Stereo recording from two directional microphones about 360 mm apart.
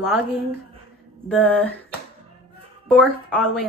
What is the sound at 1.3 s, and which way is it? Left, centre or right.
Speech, centre.